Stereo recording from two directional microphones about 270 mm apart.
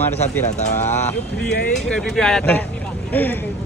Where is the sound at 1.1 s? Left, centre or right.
Left.